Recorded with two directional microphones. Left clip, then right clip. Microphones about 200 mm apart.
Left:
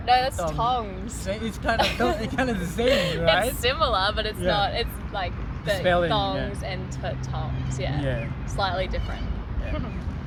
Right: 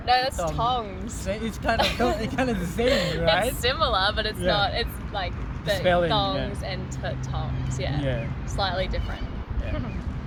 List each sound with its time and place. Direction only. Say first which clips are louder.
0.0 s speech: left 1 dB; 10° left (ahead or behind)
1.3 s speech: even; 10° right (ahead or behind)
2.9 s speech: left 2 dB; 15° left (ahead or behind)
5.8 s speech: even; 10° right (ahead or behind)
6.1 s speech: even; 10° left (ahead or behind)